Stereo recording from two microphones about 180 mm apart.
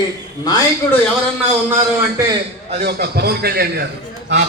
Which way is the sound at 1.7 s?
15° right (ahead or behind).